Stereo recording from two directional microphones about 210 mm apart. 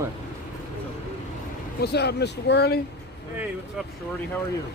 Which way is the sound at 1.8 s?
50° left (ahead or behind).